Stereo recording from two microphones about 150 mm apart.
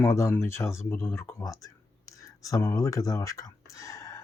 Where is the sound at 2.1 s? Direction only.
20° left (ahead or behind).